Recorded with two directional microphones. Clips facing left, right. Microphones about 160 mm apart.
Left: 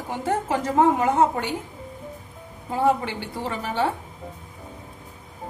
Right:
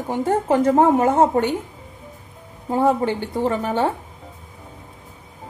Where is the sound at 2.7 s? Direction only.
45° right (ahead or behind).